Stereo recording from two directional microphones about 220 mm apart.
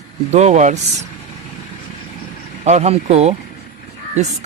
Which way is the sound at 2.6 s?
30° right (ahead or behind).